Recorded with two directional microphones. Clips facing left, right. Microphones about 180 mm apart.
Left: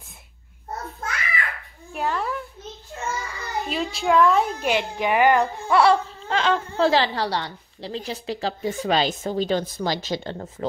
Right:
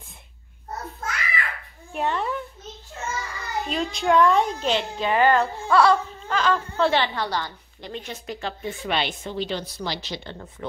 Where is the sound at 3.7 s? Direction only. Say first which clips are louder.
Even; 5° left (ahead or behind).